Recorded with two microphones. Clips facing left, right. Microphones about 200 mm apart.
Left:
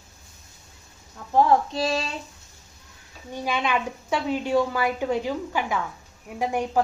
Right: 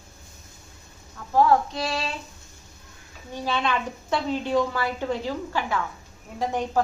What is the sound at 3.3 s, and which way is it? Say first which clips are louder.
A woman's voice: left 1 dB; 10° left (ahead or behind).